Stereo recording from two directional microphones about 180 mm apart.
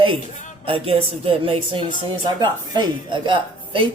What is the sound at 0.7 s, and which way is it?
A woman's voice, 30° right (ahead or behind).